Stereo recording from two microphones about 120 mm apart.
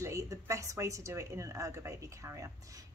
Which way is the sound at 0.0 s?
25° right (ahead or behind).